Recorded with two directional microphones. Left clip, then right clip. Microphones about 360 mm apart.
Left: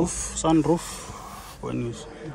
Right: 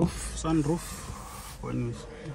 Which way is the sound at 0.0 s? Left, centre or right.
Centre.